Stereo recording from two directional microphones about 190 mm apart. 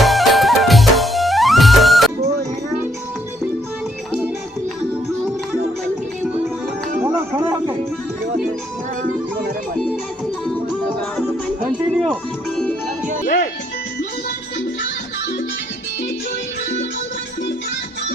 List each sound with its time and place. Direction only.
0.0 s music: centre (ahead or behind)
7.0 s music: 10° right (ahead or behind)
9.7 s music: centre (ahead or behind)
11.2 s music: centre (ahead or behind)
13.2 s music: 45° left (ahead or behind)